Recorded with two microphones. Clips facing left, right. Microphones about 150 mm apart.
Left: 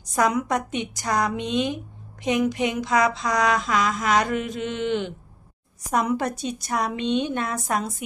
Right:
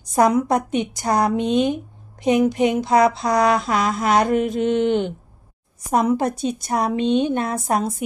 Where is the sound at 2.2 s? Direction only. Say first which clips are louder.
Right 6 dB; 35° right (ahead or behind).